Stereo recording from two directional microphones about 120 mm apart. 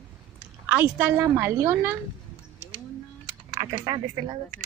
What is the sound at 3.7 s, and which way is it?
Speech, 45° right (ahead or behind).